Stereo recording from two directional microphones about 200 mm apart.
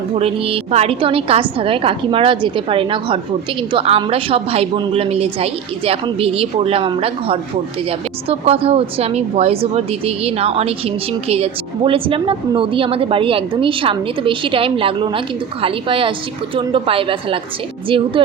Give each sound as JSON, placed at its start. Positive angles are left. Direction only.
{"t": 0.1, "sound": "a woman's voice", "side_deg": -30}